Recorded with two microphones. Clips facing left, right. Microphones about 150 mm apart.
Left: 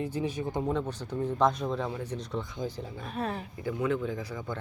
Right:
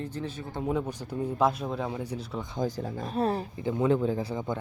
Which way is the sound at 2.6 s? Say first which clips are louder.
Right 5 dB; 45° right (ahead or behind).